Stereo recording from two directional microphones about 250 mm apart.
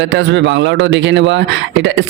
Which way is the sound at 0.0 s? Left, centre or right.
Right.